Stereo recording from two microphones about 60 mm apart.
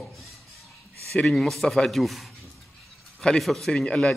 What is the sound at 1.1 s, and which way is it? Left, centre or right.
A man's voice, centre.